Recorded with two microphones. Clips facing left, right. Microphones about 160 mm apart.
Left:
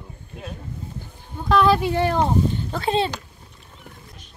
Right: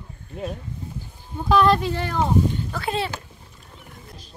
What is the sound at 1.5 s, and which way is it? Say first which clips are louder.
Speech: even; centre (ahead or behind).